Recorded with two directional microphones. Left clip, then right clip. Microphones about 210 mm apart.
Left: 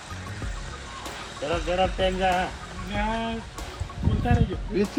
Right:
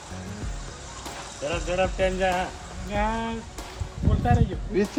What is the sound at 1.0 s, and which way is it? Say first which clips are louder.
Speech: even; centre (ahead or behind).